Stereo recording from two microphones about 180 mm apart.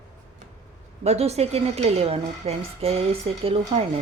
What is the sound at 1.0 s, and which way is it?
Speech, 35° right (ahead or behind).